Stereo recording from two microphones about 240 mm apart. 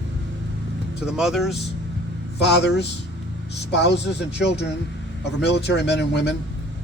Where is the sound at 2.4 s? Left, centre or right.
Left.